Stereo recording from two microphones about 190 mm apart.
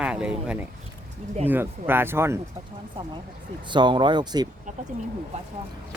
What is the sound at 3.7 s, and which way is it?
Speech, 25° right (ahead or behind).